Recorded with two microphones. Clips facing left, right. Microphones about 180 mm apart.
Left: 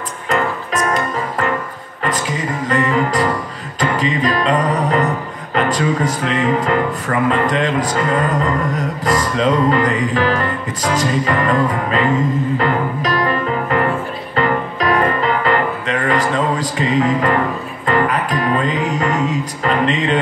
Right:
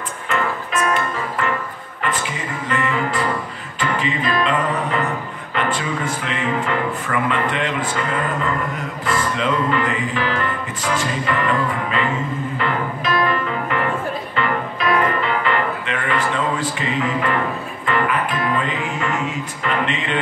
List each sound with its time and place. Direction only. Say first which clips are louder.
0.3 s music: left 4 dB; 40° left (ahead or behind)